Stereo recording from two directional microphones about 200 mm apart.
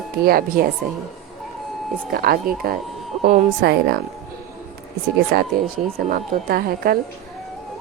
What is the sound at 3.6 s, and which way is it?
Speech, 55° right (ahead or behind).